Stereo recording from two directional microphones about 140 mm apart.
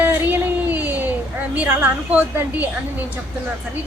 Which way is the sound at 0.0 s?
15° right (ahead or behind).